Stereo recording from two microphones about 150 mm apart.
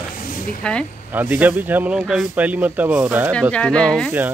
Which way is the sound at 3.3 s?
5° left (ahead or behind).